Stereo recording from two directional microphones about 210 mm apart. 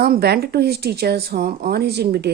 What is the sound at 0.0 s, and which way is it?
Speech, 45° right (ahead or behind).